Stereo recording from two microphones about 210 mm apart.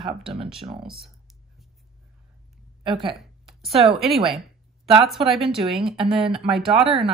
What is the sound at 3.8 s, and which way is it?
Speech, centre (ahead or behind).